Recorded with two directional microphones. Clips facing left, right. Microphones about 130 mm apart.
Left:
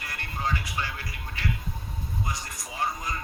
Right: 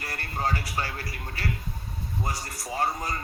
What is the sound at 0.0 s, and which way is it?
Speech, 40° right (ahead or behind).